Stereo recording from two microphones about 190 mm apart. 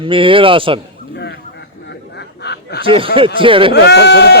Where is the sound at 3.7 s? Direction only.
60° left (ahead or behind).